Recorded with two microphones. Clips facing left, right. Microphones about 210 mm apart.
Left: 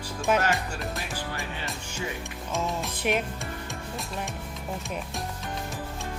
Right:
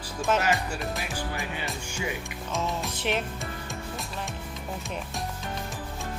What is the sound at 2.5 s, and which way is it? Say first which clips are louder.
Music: even; centre (ahead or behind).